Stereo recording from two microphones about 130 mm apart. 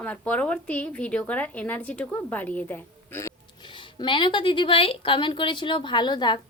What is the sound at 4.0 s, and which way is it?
A woman's voice, 40° left (ahead or behind).